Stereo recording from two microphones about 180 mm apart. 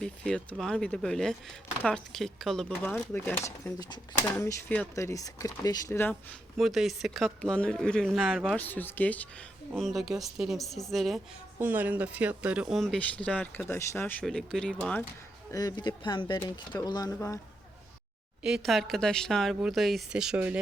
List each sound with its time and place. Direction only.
0.0 s speech: 5° left (ahead or behind)
6.6 s speech: centre (ahead or behind)
8.5 s speech: 10° left (ahead or behind)
15.5 s speech: 25° left (ahead or behind)
18.4 s speech: centre (ahead or behind)